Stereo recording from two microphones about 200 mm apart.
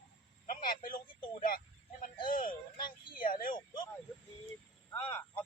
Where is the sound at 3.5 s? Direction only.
20° left (ahead or behind).